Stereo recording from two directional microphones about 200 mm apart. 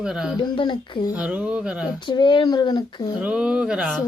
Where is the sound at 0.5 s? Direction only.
25° left (ahead or behind).